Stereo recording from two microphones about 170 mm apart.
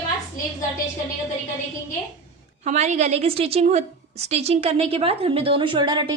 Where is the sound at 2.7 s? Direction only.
45° right (ahead or behind).